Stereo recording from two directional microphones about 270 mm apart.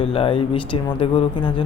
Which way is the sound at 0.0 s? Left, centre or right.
Left.